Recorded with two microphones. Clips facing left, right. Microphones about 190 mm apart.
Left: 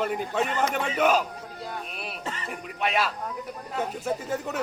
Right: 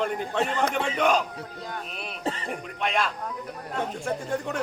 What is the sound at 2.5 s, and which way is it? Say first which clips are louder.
A man's voice: even; 5° left (ahead or behind).